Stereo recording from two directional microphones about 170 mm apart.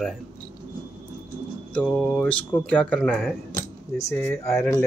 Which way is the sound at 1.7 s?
5° left (ahead or behind).